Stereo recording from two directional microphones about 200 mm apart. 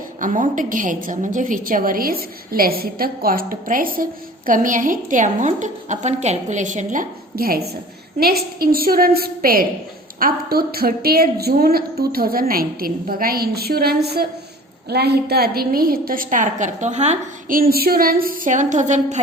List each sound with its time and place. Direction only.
0.2 s a woman's voice: 40° right (ahead or behind)